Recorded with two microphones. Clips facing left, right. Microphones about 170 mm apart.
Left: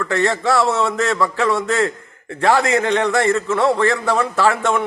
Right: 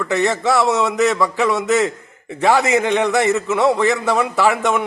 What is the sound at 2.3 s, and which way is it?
A man's voice, 15° right (ahead or behind).